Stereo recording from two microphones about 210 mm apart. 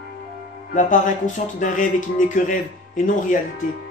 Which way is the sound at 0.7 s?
40° left (ahead or behind).